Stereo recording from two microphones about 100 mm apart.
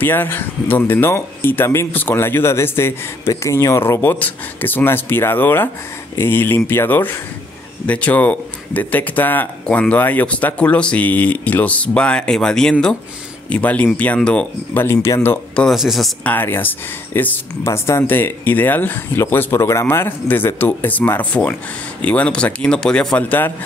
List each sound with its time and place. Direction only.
0.0 s speech: 20° left (ahead or behind)
14.8 s speech: 25° left (ahead or behind)
15.7 s speech: 5° right (ahead or behind)
16.3 s speech: 20° left (ahead or behind)